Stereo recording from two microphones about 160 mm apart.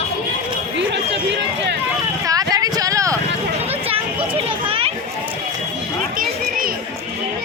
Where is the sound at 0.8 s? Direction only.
90° right.